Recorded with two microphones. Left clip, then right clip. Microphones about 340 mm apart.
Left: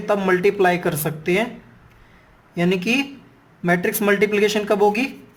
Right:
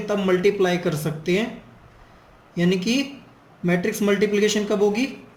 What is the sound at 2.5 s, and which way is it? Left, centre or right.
Speech, left.